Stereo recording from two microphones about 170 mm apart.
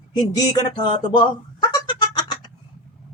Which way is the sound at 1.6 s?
25° left (ahead or behind).